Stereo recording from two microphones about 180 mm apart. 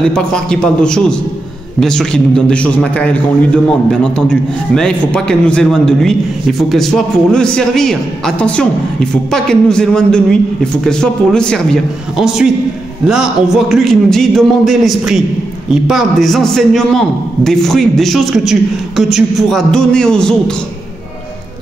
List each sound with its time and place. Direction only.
0.1 s a man's voice: 5° left (ahead or behind)